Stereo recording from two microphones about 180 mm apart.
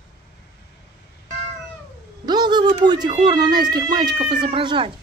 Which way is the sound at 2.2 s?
25° right (ahead or behind).